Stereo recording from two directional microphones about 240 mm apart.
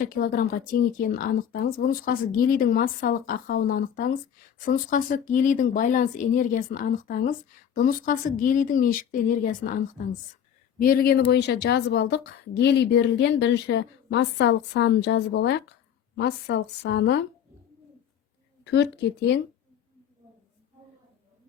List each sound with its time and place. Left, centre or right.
0.0 s a woman's voice: left
18.6 s a woman's voice: left